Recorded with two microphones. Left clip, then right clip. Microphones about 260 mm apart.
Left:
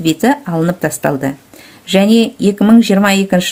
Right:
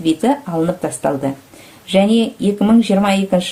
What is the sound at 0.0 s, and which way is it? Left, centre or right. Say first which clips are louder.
Speech: left 3 dB; left.